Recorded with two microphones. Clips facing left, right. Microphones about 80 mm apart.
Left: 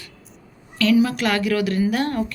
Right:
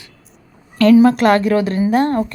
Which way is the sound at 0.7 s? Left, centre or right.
Right.